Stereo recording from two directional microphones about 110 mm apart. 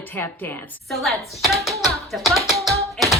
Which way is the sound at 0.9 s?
Centre (ahead or behind).